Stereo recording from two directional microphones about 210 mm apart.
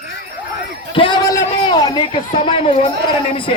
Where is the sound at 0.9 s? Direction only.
25° left (ahead or behind).